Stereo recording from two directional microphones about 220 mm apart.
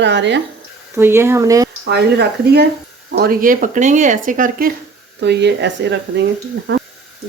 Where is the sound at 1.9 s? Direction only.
50° right (ahead or behind).